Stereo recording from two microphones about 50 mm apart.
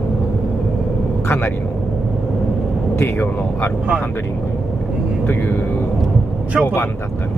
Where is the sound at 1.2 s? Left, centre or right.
Left.